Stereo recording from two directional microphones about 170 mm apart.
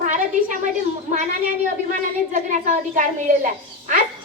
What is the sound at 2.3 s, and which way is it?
Speech, 45° right (ahead or behind).